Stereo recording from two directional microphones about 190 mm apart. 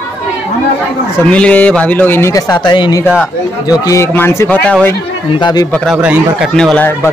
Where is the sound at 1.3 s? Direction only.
5° left (ahead or behind).